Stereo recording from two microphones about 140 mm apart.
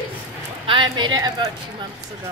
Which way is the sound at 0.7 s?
35° right (ahead or behind).